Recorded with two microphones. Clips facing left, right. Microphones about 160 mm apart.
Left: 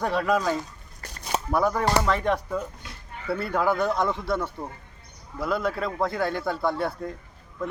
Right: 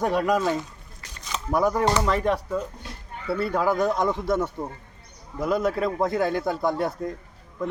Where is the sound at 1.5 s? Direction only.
10° right (ahead or behind).